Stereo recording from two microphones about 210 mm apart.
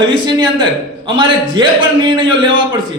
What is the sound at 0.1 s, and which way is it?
A man's voice, 20° right (ahead or behind).